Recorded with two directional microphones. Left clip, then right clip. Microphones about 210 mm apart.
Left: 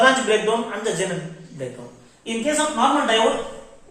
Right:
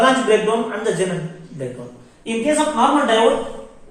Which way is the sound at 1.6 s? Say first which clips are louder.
Right 3 dB; 25° left (ahead or behind).